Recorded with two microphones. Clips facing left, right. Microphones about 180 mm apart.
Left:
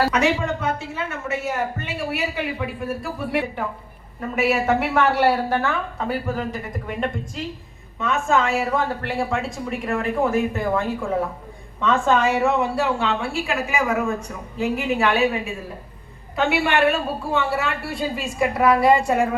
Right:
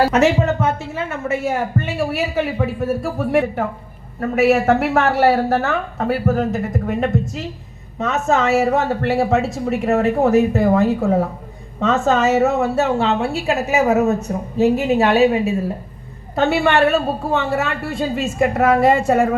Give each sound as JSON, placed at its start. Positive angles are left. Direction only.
{"t": 0.1, "sound": "a woman's voice", "side_deg": -45}